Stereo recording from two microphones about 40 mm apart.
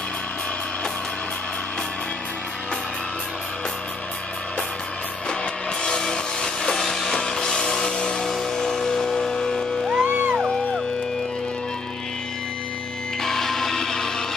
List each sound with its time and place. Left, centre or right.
5.4 s music: left
7.2 s music: left
10.0 s music: right
13.2 s music: centre